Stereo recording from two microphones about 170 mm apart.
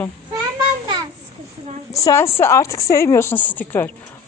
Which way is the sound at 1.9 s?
15° left (ahead or behind).